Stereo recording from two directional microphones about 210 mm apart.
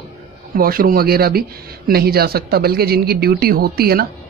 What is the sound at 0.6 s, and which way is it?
Speech, 45° right (ahead or behind).